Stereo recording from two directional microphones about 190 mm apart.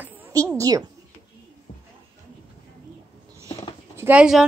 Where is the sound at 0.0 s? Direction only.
15° right (ahead or behind).